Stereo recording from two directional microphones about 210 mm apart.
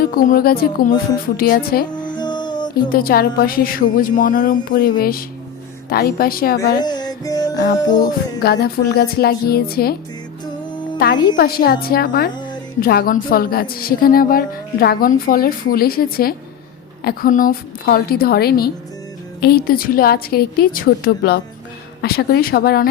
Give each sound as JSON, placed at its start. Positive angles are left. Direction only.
{"t": 0.0, "sound": "a woman's voice", "side_deg": 45}
{"t": 2.1, "sound": "music", "side_deg": 20}
{"t": 2.9, "sound": "a woman's voice", "side_deg": 45}
{"t": 6.8, "sound": "music", "side_deg": 20}
{"t": 8.4, "sound": "a woman's voice", "side_deg": 45}
{"t": 11.3, "sound": "a woman's voice", "side_deg": 45}